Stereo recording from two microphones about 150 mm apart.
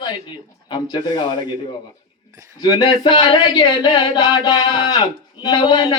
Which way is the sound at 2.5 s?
30° left (ahead or behind).